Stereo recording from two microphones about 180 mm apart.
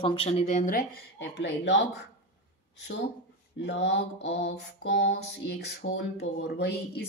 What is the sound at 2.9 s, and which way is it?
Speech, 90° left.